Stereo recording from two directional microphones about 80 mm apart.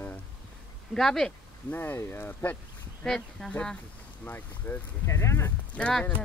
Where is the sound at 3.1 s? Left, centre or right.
Centre.